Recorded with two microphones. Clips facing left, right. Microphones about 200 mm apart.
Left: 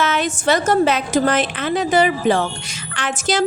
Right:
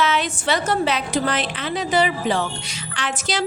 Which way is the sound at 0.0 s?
45° left (ahead or behind).